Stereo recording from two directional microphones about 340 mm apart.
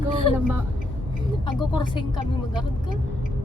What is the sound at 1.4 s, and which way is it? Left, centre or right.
Speech, centre.